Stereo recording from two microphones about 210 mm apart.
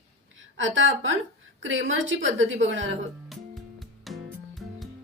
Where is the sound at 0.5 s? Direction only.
65° right (ahead or behind).